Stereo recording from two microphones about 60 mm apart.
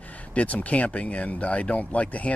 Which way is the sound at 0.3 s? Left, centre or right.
Left.